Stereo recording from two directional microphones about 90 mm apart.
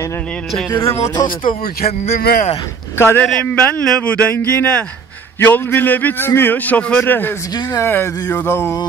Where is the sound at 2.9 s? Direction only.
25° left (ahead or behind).